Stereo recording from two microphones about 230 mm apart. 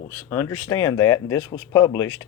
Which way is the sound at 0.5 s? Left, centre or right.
Left.